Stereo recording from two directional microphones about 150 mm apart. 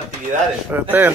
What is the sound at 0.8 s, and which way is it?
Speech, 15° right (ahead or behind).